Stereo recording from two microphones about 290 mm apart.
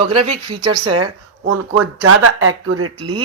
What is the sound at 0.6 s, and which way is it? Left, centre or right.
Speech, right.